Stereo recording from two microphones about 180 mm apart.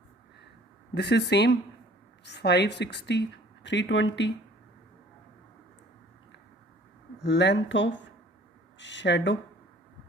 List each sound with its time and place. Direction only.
0.9 s a woman's voice: 70° left (ahead or behind)
7.2 s a woman's voice: 70° left (ahead or behind)